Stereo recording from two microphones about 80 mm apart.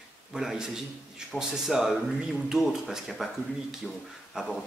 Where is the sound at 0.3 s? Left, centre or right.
Centre.